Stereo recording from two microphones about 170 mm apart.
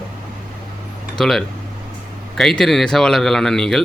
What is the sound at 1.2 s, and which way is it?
A man's voice, centre (ahead or behind).